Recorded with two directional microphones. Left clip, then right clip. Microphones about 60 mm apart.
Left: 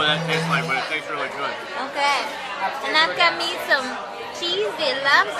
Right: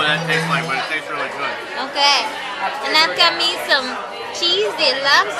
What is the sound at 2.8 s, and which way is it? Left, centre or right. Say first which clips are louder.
Speech: right 4 dB; right.